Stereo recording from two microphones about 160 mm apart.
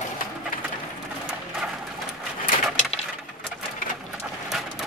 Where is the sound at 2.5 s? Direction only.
45° left (ahead or behind).